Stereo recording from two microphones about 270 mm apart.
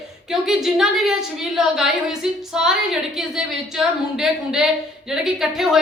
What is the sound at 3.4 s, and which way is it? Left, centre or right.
A woman's voice, centre.